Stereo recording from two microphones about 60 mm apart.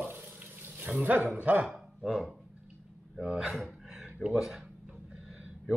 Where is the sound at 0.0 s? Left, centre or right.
Right.